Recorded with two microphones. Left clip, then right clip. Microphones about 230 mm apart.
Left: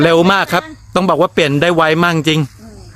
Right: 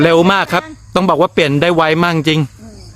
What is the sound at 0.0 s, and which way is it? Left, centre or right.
Speech, centre.